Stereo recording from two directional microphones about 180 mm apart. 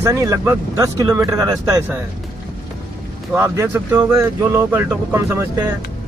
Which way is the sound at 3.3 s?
15° right (ahead or behind).